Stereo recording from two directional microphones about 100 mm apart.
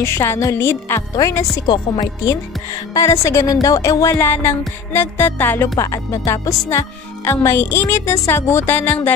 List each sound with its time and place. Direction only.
0.0 s speech: 25° left (ahead or behind)
1.1 s music: 35° left (ahead or behind)
1.7 s speech: 40° left (ahead or behind)
2.9 s speech: 30° left (ahead or behind)
3.6 s music: 35° left (ahead or behind)
4.2 s speech: 20° left (ahead or behind)